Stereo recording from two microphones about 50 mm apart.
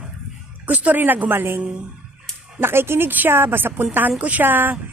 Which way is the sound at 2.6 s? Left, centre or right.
Right.